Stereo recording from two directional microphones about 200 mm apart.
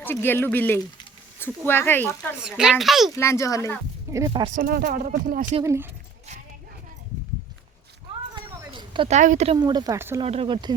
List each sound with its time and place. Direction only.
0.0 s speech: 10° left (ahead or behind)
2.4 s speech: 5° right (ahead or behind)
3.2 s speech: 15° left (ahead or behind)
4.3 s speech: 30° right (ahead or behind)
4.5 s speech: 45° right (ahead or behind)
5.6 s speech: 15° right (ahead or behind)
8.4 s a sound: 25° right (ahead or behind)
9.1 s a woman's voice: 35° right (ahead or behind)
9.6 s speech: 20° right (ahead or behind)
10.2 s speech: 30° right (ahead or behind)